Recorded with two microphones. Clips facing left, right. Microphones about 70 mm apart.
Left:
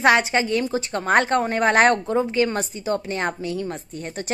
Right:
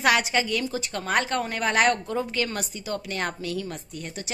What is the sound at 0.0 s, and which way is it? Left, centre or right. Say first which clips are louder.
A woman's voice: left 5 dB; left.